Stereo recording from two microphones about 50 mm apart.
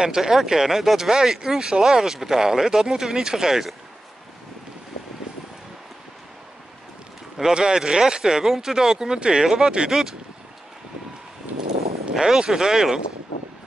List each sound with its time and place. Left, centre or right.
0.0 s speech: centre
5.3 s a sound: centre
7.5 s speech: centre
12.1 s speech: centre